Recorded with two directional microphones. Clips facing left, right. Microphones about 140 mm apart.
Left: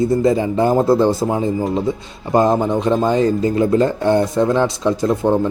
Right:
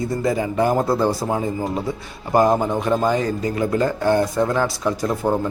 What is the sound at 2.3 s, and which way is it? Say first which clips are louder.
Speech: left 2 dB; 20° left (ahead or behind).